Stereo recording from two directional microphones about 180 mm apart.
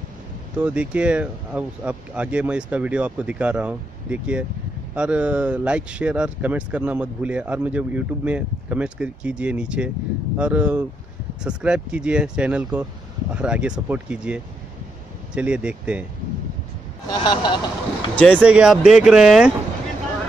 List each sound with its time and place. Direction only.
0.6 s speech: 5° right (ahead or behind)
17.1 s speech: 25° left (ahead or behind)
18.1 s speech: 5° left (ahead or behind)
18.4 s speech: 5° right (ahead or behind)